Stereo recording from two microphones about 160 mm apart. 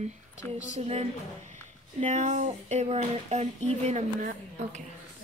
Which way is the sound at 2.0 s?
50° right (ahead or behind).